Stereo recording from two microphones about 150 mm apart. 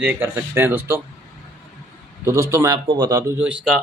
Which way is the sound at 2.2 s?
20° right (ahead or behind).